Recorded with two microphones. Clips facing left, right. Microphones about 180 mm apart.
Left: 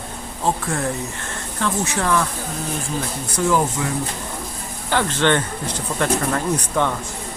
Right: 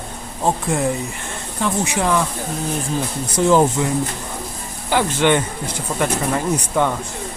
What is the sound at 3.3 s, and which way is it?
Speech, 25° right (ahead or behind).